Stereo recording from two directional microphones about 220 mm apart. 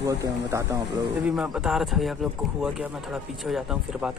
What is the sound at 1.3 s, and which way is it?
Speech, 5° right (ahead or behind).